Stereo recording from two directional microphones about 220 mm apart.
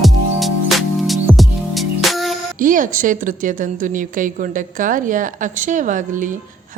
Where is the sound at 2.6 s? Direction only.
35° right (ahead or behind).